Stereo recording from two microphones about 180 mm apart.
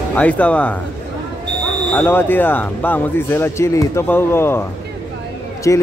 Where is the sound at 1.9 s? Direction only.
10° left (ahead or behind).